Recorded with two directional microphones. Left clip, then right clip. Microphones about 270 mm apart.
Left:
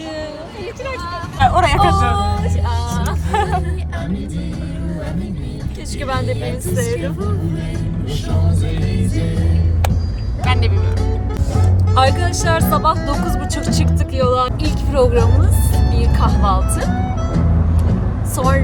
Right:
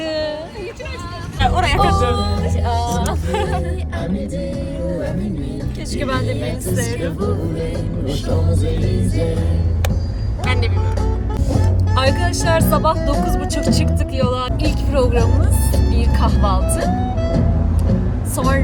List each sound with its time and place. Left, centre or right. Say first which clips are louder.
1.4 s vehicle: left 3 dB; left
2.1 s music: left 2 dB; centre
3.3 s music: left 5 dB; left
6.0 s speech: even; centre
10.4 s music: left 2 dB; centre
11.9 s speech: left 3 dB; centre
18.3 s a woman's voice: left 2 dB; centre